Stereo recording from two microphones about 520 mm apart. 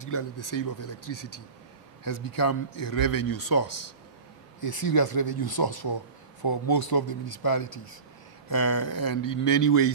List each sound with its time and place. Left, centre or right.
0.0 s speech: left